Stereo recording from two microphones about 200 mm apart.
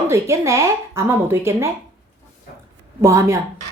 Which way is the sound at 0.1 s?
15° right (ahead or behind).